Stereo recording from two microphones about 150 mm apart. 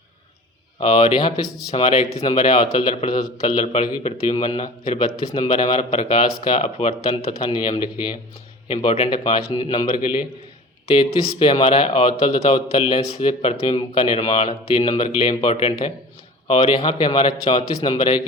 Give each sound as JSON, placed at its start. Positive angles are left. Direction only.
{"t": 0.8, "sound": "a man's voice", "side_deg": 35}
{"t": 7.5, "sound": "speech", "side_deg": 30}
{"t": 8.6, "sound": "speech", "side_deg": 40}
{"t": 9.0, "sound": "speech", "side_deg": 30}